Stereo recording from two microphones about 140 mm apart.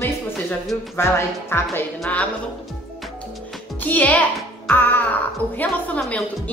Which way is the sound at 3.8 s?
10° left (ahead or behind).